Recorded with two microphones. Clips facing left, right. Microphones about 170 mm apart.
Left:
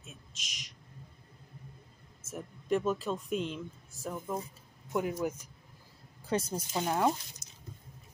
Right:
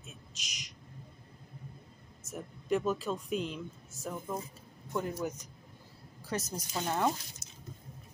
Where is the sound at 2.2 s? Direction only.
Centre (ahead or behind).